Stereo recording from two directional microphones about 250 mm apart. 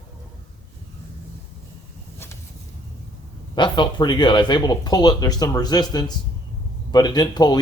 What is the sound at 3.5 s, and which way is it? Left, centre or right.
Speech, centre.